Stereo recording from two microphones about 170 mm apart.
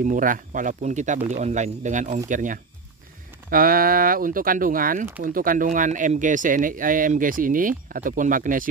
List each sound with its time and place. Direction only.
0.0 s speech: 50° right (ahead or behind)